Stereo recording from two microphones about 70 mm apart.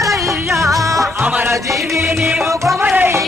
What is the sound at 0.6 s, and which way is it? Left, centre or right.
Music, right.